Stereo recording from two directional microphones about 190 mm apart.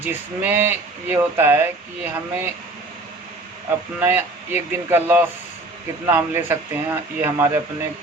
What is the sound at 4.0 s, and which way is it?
Speech, 10° right (ahead or behind).